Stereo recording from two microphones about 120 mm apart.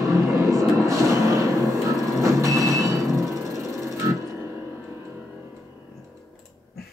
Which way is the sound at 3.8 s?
25° right (ahead or behind).